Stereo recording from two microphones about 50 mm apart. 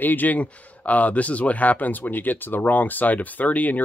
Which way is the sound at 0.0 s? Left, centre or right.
Left.